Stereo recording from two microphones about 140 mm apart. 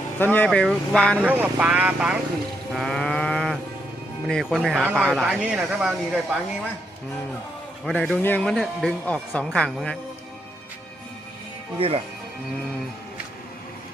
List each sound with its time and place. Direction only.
0.2 s speech: 10° left (ahead or behind)
1.2 s speech: 10° right (ahead or behind)
2.7 s livestock: centre (ahead or behind)
4.3 s a woman's voice: 5° left (ahead or behind)
7.9 s a woman's voice: 5° left (ahead or behind)
11.8 s speech: 45° right (ahead or behind)